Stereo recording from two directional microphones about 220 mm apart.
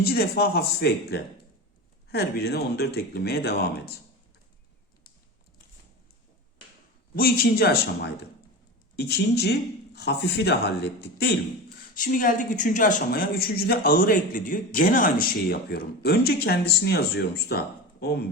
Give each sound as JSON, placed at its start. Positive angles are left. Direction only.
{"t": 0.0, "sound": "speech", "side_deg": 45}
{"t": 7.2, "sound": "speech", "side_deg": 45}
{"t": 11.9, "sound": "speech", "side_deg": 35}